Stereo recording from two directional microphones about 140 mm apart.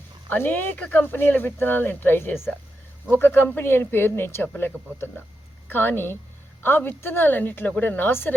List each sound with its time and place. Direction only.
0.3 s speech: 15° left (ahead or behind)